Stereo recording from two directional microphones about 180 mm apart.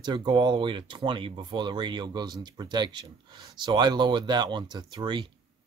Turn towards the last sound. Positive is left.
turn(degrees=-25)  # may be behind; listen again after turning